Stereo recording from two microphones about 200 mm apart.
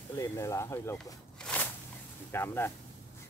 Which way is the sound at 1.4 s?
10° left (ahead or behind).